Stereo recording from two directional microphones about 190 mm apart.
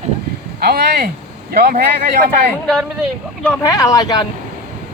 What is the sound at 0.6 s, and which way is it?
Speech, 55° right (ahead or behind).